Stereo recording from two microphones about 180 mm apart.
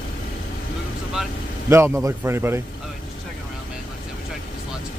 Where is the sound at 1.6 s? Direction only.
15° right (ahead or behind).